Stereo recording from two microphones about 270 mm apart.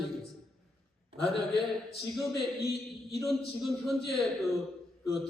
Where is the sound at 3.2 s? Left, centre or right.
Centre.